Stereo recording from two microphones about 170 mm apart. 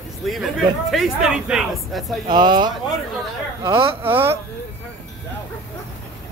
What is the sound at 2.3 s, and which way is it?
Speech, 25° right (ahead or behind).